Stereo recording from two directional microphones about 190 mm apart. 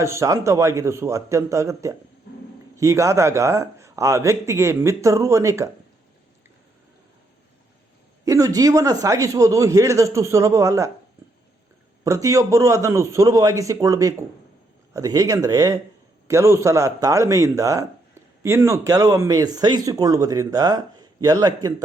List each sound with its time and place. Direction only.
0.0 s speech: 15° right (ahead or behind)
8.2 s speech: 15° right (ahead or behind)
12.0 s speech: 15° right (ahead or behind)